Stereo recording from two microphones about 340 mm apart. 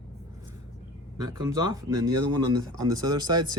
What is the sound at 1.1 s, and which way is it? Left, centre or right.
Speech, centre.